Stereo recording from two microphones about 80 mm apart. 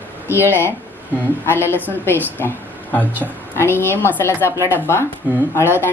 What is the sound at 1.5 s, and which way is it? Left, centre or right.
Speech, left.